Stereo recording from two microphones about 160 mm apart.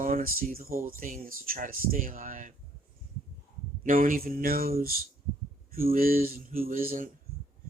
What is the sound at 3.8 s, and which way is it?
Speech, 60° right (ahead or behind).